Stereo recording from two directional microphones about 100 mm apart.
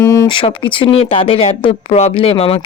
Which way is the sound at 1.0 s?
70° left (ahead or behind).